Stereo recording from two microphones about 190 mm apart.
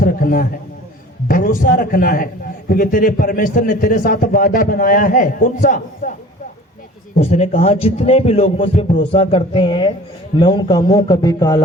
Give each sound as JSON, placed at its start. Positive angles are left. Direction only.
{"t": 0.0, "sound": "a sound", "side_deg": 50}
{"t": 1.3, "sound": "a man's voice", "side_deg": 50}
{"t": 7.2, "sound": "a man's voice", "side_deg": 35}